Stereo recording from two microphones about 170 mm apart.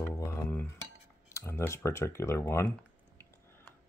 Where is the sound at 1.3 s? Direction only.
15° left (ahead or behind).